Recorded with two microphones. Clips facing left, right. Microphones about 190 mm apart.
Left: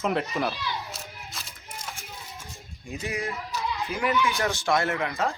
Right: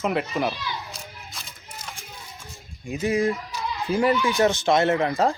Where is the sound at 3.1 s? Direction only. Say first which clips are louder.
Right 9 dB; 30° right (ahead or behind).